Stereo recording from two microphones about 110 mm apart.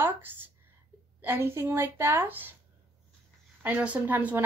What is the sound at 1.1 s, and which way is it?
A woman's voice, 20° right (ahead or behind).